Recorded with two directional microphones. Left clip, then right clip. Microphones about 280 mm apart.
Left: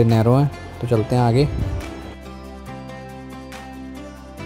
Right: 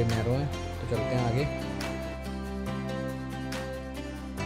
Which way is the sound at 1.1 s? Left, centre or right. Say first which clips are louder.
Left 12 dB; left.